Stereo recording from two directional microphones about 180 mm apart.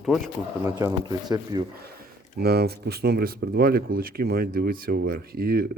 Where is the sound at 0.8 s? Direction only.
20° right (ahead or behind).